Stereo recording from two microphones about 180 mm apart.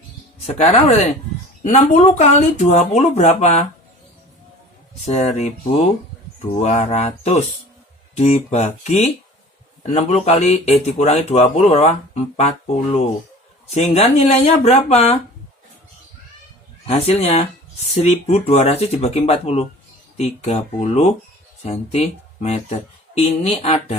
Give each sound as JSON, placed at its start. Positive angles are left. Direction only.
{"t": 0.4, "sound": "speech", "side_deg": 35}
{"t": 5.0, "sound": "speech", "side_deg": 40}
{"t": 16.8, "sound": "speech", "side_deg": 35}